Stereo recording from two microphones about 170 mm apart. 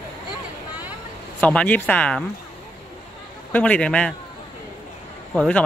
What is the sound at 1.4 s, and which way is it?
Speech, 10° left (ahead or behind).